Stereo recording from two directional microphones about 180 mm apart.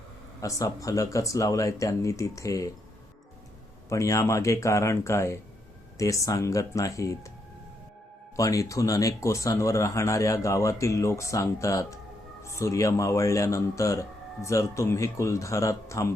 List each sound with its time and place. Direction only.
0.4 s speech: 20° left (ahead or behind)
3.8 s speech: 15° left (ahead or behind)
8.4 s speech: 20° left (ahead or behind)